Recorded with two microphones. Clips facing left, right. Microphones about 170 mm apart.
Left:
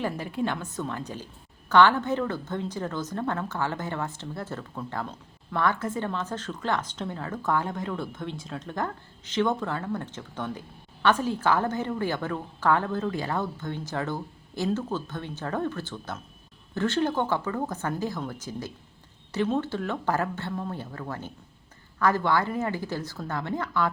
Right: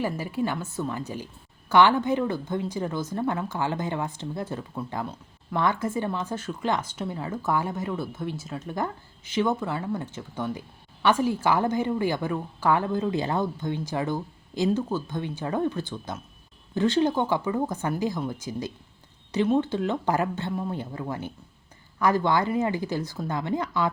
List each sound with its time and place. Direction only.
0.0 s a woman's voice: 5° right (ahead or behind)